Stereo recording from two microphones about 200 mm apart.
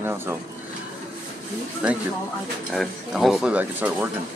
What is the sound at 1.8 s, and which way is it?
Speech, 5° right (ahead or behind).